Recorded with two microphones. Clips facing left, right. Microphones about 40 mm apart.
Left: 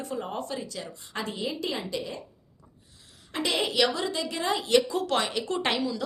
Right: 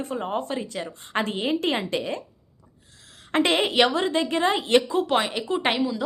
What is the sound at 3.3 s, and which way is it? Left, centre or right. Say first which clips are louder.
A woman's voice: right 6 dB; right.